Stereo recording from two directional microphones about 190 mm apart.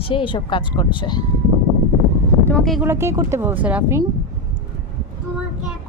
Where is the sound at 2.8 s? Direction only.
15° right (ahead or behind).